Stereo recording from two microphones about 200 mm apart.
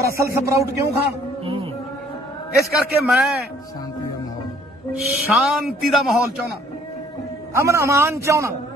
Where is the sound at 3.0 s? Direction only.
5° right (ahead or behind).